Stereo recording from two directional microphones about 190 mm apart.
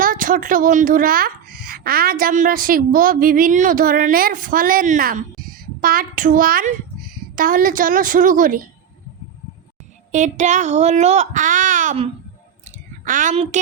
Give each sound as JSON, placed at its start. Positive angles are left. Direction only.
{"t": 0.0, "sound": "speech", "side_deg": -45}
{"t": 10.1, "sound": "speech", "side_deg": -40}
{"t": 13.1, "sound": "speech", "side_deg": -40}